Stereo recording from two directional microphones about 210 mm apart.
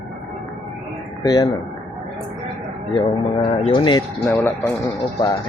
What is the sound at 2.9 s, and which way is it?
Speech, 25° left (ahead or behind).